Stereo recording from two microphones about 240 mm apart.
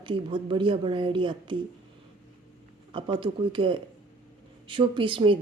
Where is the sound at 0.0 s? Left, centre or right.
Centre.